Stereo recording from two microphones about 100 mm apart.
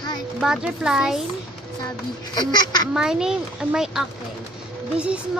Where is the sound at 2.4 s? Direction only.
45° left (ahead or behind).